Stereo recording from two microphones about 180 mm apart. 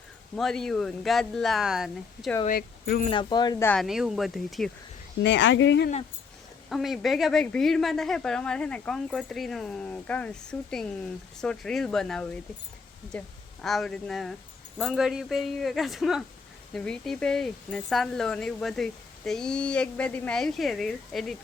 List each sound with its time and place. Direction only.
0.3 s speech: centre (ahead or behind)
2.5 s speech: 60° left (ahead or behind)
3.1 s speech: 25° left (ahead or behind)
3.7 s speech: centre (ahead or behind)
5.2 s speech: 85° left
6.7 s speech: centre (ahead or behind)